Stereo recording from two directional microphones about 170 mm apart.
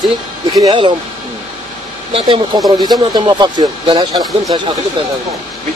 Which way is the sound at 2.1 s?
30° right (ahead or behind).